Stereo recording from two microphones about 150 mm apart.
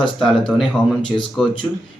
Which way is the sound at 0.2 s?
Centre (ahead or behind).